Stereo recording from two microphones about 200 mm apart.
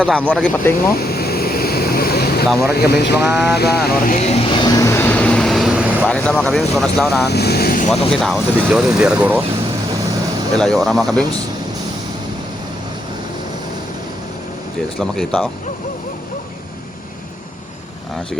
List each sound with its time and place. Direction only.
0.0 s speech: 5° left (ahead or behind)
0.9 s vehicle: 50° left (ahead or behind)
2.7 s speech: 55° left (ahead or behind); by 7.3 s centre (ahead or behind)
7.3 s vehicle: 55° left (ahead or behind)
7.9 s speech: centre (ahead or behind)
10.5 s speech: 5° left (ahead or behind)
14.9 s speech: centre (ahead or behind)